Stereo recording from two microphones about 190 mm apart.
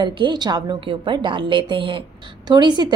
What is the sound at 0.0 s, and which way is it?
A woman's voice, 25° right (ahead or behind).